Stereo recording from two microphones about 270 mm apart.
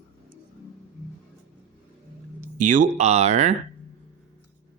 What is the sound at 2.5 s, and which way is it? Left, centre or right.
Speech, right.